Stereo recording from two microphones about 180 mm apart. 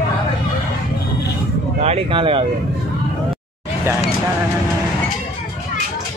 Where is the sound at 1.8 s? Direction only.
35° right (ahead or behind).